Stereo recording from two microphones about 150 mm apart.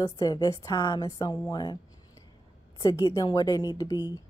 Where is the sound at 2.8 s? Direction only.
25° left (ahead or behind).